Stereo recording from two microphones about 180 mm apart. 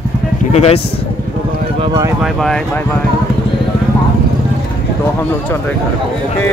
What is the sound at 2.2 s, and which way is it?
Speech, centre (ahead or behind).